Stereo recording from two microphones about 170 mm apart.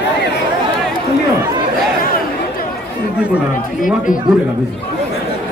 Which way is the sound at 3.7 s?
50° left (ahead or behind).